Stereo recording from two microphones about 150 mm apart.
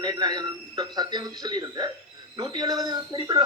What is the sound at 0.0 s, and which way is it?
Speech, 30° right (ahead or behind).